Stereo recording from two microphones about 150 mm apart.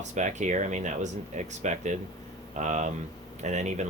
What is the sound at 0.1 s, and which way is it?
Speech, 55° right (ahead or behind).